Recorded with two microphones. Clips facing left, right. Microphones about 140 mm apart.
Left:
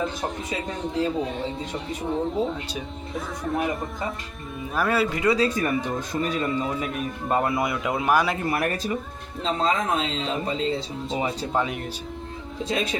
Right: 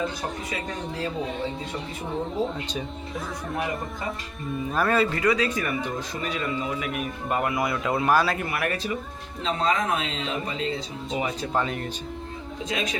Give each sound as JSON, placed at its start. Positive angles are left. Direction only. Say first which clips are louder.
{"t": 1.2, "sound": "speech", "louder": "left 1 dB", "side_deg": 0}
{"t": 5.2, "sound": "speech", "louder": "left 2 dB", "side_deg": 30}
{"t": 8.4, "sound": "speech", "louder": "left 3 dB", "side_deg": 35}
{"t": 11.5, "sound": "speech", "louder": "even", "side_deg": 5}
{"t": 12.5, "sound": "a man's voice", "louder": "left 3 dB", "side_deg": 35}